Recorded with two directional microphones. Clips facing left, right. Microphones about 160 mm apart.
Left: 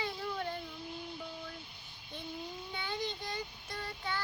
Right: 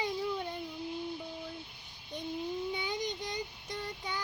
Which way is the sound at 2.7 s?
15° right (ahead or behind).